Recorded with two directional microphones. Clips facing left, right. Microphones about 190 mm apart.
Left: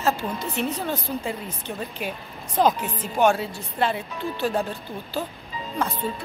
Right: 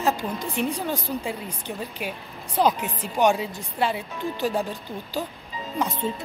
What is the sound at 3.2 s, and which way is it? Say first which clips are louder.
Speech: left 1 dB; 15° right (ahead or behind).